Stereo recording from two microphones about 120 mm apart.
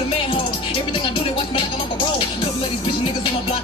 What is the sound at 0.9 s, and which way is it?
Speech, 45° left (ahead or behind).